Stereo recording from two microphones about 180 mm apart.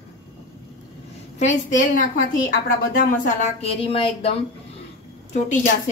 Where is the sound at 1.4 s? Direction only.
45° left (ahead or behind).